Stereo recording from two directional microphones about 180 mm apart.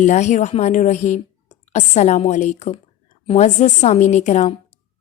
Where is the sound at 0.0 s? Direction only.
40° left (ahead or behind).